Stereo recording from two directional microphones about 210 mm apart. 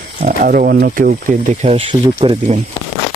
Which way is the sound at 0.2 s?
40° right (ahead or behind).